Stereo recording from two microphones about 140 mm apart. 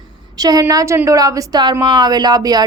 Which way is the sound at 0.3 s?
25° right (ahead or behind).